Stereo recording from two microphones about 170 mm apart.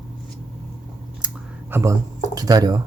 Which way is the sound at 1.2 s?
15° right (ahead or behind).